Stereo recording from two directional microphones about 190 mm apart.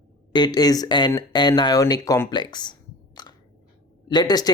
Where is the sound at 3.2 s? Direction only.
20° left (ahead or behind).